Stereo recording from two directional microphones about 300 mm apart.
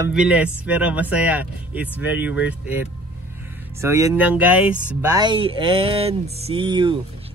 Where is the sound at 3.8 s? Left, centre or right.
Centre.